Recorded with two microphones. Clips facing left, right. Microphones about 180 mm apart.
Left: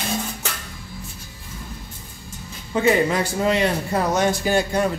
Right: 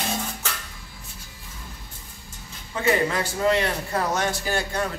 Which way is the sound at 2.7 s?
15° left (ahead or behind).